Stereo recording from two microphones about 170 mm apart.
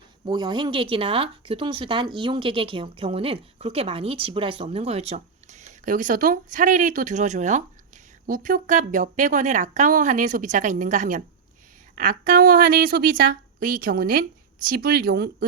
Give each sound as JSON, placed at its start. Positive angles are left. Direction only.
{"t": 0.3, "sound": "a woman's voice", "side_deg": -25}